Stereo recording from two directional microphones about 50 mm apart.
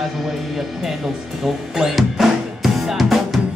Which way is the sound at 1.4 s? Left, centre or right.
Centre.